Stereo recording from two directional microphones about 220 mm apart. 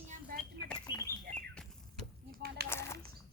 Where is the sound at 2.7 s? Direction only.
10° left (ahead or behind).